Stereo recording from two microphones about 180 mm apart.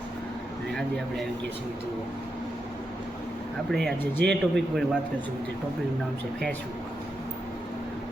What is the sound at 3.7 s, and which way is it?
A man's voice, centre (ahead or behind).